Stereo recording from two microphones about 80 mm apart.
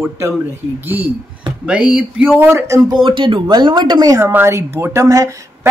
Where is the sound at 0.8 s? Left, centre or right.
Right.